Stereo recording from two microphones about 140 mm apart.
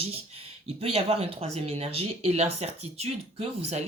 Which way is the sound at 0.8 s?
45° right (ahead or behind).